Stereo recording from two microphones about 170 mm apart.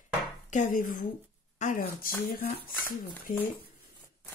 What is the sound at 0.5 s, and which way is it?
Speech, 50° left (ahead or behind).